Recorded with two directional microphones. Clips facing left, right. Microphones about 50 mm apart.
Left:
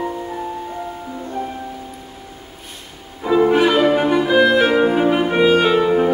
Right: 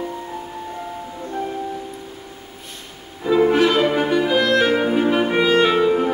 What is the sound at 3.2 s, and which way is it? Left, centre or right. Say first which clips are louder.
Music: left 1 dB; centre.